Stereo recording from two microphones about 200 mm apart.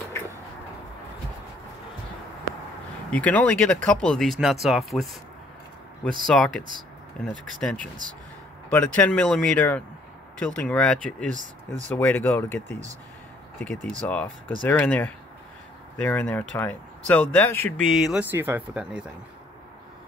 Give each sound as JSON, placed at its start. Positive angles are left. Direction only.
{"t": 3.1, "sound": "speech", "side_deg": 5}
{"t": 11.3, "sound": "speech", "side_deg": -35}
{"t": 11.9, "sound": "speech", "side_deg": 10}
{"t": 17.9, "sound": "speech", "side_deg": -5}